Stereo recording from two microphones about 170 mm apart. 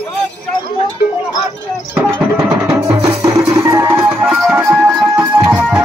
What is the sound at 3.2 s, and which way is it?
Music, 15° right (ahead or behind).